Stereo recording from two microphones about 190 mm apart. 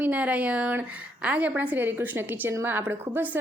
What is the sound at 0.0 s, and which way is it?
A woman's voice, 10° right (ahead or behind).